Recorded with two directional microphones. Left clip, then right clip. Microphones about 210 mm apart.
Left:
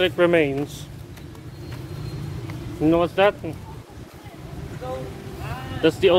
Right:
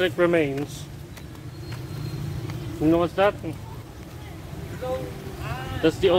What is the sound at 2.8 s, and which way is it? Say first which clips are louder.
Speech: left 2 dB; 25° left (ahead or behind).